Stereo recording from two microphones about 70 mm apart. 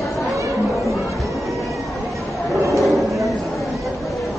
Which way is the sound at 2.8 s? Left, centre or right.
Centre.